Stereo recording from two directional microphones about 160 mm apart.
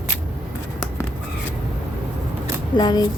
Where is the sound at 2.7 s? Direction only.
25° left (ahead or behind).